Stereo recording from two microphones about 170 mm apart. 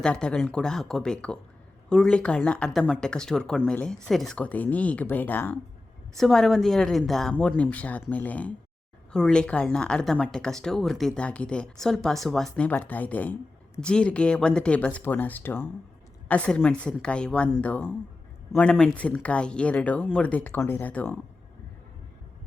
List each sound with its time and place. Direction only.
0.0 s speech: 5° left (ahead or behind)